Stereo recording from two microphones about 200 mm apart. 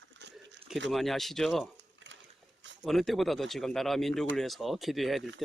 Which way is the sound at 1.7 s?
65° right (ahead or behind).